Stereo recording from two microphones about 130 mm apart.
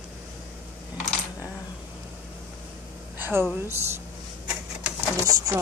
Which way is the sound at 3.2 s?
15° right (ahead or behind).